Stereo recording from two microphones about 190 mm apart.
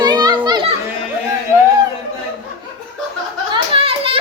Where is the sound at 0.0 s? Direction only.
20° right (ahead or behind).